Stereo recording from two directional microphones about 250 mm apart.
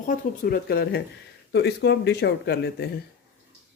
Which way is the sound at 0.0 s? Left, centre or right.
Left.